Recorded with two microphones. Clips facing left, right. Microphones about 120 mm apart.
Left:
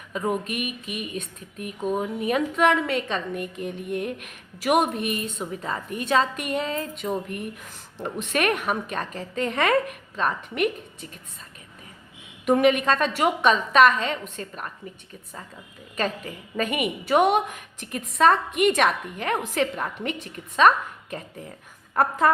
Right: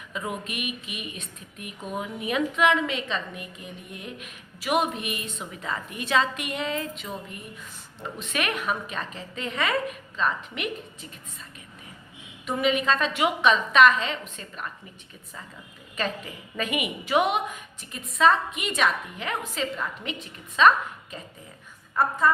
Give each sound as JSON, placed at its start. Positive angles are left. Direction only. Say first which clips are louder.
{"t": 0.3, "sound": "speech", "louder": "left 7 dB", "side_deg": 45}
{"t": 5.4, "sound": "speech", "louder": "left 3 dB", "side_deg": 35}
{"t": 8.3, "sound": "speech", "louder": "left 4 dB", "side_deg": 45}
{"t": 12.5, "sound": "speech", "louder": "left 5 dB", "side_deg": 55}
{"t": 16.0, "sound": "speech", "louder": "left 3 dB", "side_deg": 45}
{"t": 22.2, "sound": "speech", "louder": "left 2 dB", "side_deg": 60}